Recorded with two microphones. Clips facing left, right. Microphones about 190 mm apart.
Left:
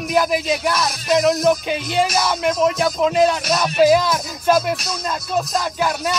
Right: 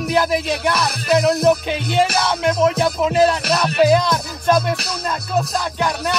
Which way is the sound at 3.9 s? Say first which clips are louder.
Even; 5° left (ahead or behind).